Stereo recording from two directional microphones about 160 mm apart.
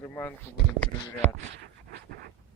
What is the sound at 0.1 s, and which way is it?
Speech, 15° left (ahead or behind).